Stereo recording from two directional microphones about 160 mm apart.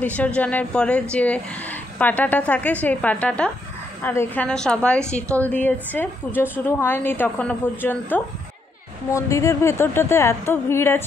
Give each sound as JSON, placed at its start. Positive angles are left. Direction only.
{"t": 0.0, "sound": "a woman's voice", "side_deg": 10}